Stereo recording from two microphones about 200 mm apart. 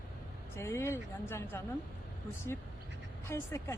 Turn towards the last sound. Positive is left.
turn(degrees=15)  # may be behind; listen again after turning